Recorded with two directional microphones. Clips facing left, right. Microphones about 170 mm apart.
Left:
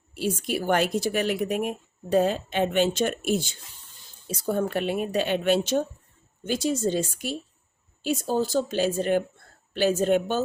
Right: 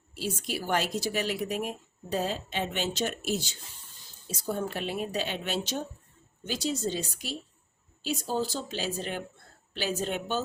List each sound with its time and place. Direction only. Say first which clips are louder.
0.1 s a woman's voice: left 6 dB; 55° left (ahead or behind)